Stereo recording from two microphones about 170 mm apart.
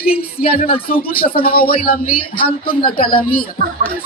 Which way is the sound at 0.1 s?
60° left (ahead or behind).